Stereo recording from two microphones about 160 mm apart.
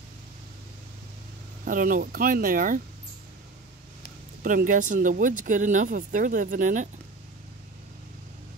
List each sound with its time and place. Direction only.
1.6 s speech: 60° right (ahead or behind)
4.4 s speech: 60° right (ahead or behind)